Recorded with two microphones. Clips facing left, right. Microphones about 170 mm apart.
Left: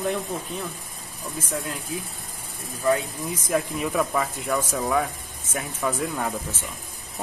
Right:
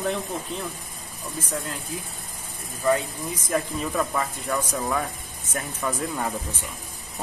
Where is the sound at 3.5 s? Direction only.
10° left (ahead or behind).